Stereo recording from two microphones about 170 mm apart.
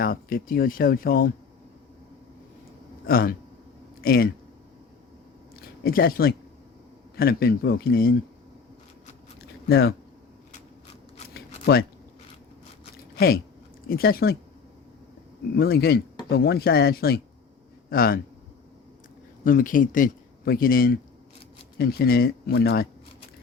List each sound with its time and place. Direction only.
0.0 s a man's voice: 60° left (ahead or behind)
3.1 s a man's voice: 60° left (ahead or behind)
5.5 s a sound: 60° left (ahead or behind)
7.2 s a man's voice: 65° left (ahead or behind)
9.6 s speech: 70° left (ahead or behind)
11.3 s a sound: 65° left (ahead or behind)
13.1 s a man's voice: 65° left (ahead or behind)
15.5 s a man's voice: 65° left (ahead or behind)
19.5 s a man's voice: 55° left (ahead or behind); by 22.9 s 75° left (ahead or behind)